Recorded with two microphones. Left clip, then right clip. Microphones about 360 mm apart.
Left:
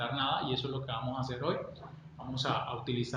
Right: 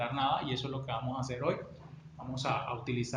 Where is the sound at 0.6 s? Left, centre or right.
Centre.